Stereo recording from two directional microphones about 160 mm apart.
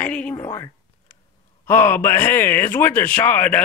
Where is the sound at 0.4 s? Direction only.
20° left (ahead or behind).